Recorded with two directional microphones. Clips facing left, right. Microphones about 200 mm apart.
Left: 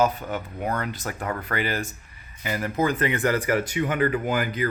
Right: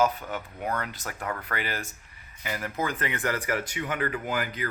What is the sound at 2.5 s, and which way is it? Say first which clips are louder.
Speech: left 6 dB; 30° left (ahead or behind).